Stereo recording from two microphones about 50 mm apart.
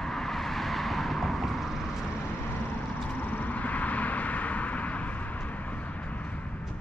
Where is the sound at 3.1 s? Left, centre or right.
Left.